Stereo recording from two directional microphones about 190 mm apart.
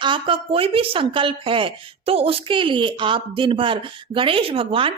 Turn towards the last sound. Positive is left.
turn(degrees=-30)  # may be behind; listen again after turning